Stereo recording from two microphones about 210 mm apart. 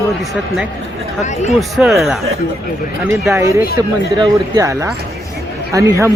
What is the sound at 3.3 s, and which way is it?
Speech, 15° right (ahead or behind).